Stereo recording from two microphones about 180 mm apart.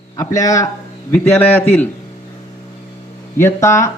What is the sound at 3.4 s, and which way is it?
Speech, 15° left (ahead or behind).